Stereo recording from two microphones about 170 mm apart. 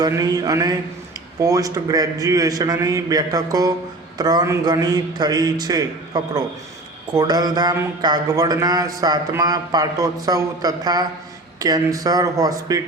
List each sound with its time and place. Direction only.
0.0 s speech: 20° right (ahead or behind)